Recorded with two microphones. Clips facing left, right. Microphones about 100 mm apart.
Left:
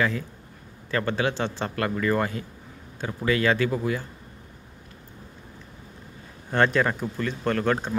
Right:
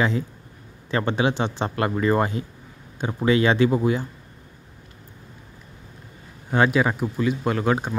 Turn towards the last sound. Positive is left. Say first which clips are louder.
# right 1 dB
turn(degrees=-10)  # may be behind; listen again after turning